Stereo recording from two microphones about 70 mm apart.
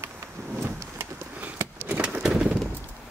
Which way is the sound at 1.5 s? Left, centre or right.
Right.